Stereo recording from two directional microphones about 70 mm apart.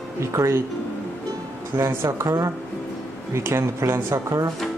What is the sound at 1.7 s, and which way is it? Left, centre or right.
Speech, right.